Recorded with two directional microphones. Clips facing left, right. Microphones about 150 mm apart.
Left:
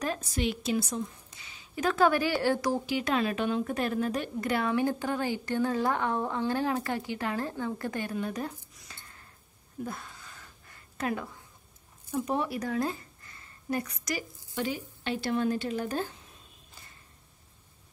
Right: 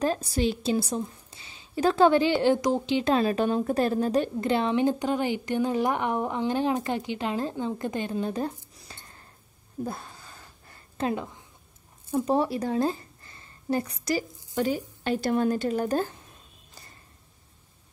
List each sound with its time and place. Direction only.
0.0 s a woman's voice: 35° right (ahead or behind)
9.8 s a sound: 30° right (ahead or behind)
12.1 s a woman's voice: 30° right (ahead or behind)
14.5 s a woman's voice: 40° right (ahead or behind)